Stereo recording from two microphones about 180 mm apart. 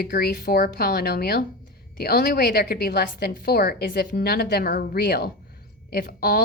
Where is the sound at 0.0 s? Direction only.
55° left (ahead or behind).